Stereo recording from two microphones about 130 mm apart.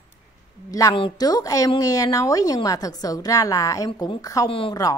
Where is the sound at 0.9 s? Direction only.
40° left (ahead or behind).